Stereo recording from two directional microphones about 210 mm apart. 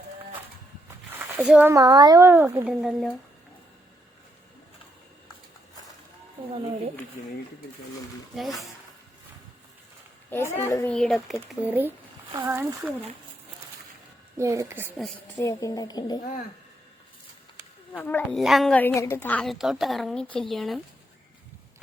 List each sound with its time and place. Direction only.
1.1 s a sound: 5° right (ahead or behind)
1.7 s speech: 20° right (ahead or behind); by 3.1 s 5° right (ahead or behind)
8.4 s a woman's voice: centre (ahead or behind)
10.2 s a woman's voice: 10° left (ahead or behind)
10.9 s speech: centre (ahead or behind); by 12.9 s 15° right (ahead or behind)
14.3 s speech: 15° right (ahead or behind)
15.4 s a woman's voice: 15° left (ahead or behind)
17.9 s a woman's voice: 5° left (ahead or behind)